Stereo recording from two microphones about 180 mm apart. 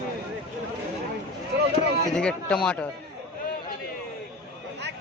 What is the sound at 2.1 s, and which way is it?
Speech, 5° left (ahead or behind).